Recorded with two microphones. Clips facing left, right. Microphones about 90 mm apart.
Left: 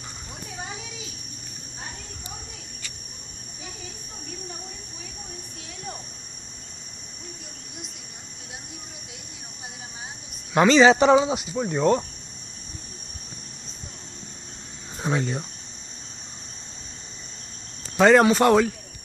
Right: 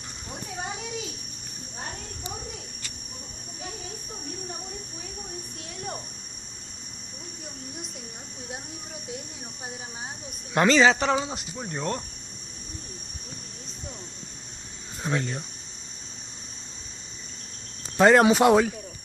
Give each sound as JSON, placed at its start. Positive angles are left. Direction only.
{"t": 10.5, "sound": "speech", "side_deg": 5}
{"t": 11.1, "sound": "speech", "side_deg": 20}
{"t": 15.0, "sound": "speech", "side_deg": 15}
{"t": 17.9, "sound": "speech", "side_deg": -5}